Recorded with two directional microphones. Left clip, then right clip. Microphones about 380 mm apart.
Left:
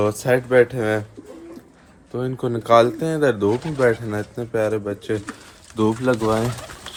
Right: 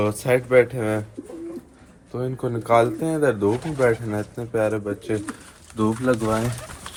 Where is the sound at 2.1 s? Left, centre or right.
Left.